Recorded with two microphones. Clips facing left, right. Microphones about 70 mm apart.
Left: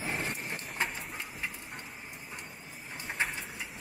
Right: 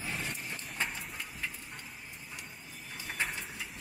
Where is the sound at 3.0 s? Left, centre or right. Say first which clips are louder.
Left 2 dB; centre.